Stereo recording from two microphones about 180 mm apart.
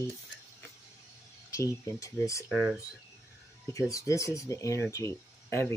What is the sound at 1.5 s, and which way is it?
Speech, 15° left (ahead or behind).